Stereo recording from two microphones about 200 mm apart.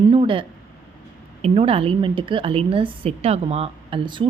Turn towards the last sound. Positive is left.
turn(degrees=-25)  # may be behind; listen again after turning